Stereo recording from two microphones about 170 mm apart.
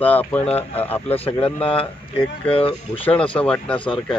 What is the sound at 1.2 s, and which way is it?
Speech, 35° left (ahead or behind).